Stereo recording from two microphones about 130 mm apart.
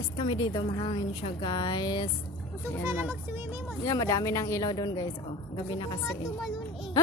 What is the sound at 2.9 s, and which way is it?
Speech, 20° right (ahead or behind).